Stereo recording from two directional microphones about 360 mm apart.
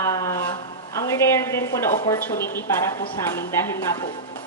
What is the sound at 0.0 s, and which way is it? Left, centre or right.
A woman's voice, centre.